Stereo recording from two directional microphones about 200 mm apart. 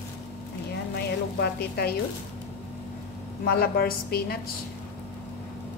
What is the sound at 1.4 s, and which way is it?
Speech, 55° left (ahead or behind).